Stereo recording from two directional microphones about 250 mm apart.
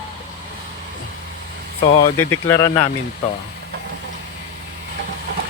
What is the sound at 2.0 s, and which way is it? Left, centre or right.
Speech, left.